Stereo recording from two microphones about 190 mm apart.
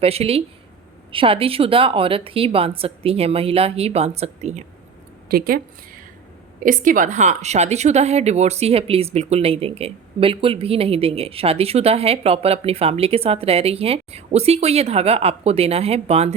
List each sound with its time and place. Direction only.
0.0 s a woman's voice: 30° right (ahead or behind)
5.3 s a woman's voice: 50° right (ahead or behind); by 16.3 s 35° right (ahead or behind)